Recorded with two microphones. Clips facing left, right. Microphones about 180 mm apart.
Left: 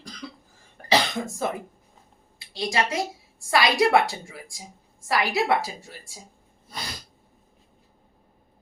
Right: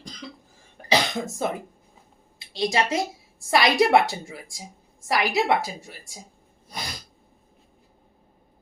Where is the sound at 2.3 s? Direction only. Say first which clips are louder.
Right 2 dB; 20° right (ahead or behind).